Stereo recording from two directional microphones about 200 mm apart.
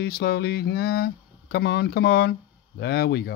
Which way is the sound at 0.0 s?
55° left (ahead or behind).